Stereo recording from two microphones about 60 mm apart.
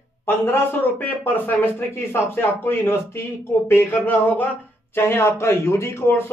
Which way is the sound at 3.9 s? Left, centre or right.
Left.